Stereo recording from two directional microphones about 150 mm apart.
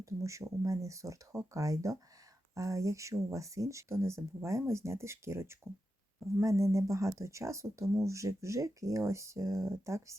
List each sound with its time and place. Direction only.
0.0 s speech: 20° right (ahead or behind)